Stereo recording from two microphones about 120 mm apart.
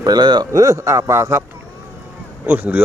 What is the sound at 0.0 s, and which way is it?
A man's voice, 35° right (ahead or behind).